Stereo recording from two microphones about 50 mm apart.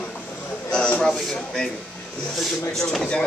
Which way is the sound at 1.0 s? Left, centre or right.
Centre.